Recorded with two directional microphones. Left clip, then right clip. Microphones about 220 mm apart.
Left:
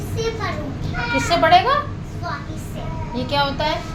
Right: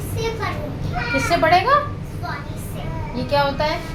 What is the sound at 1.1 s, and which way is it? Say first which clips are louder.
Speech: left 2 dB; 10° left (ahead or behind).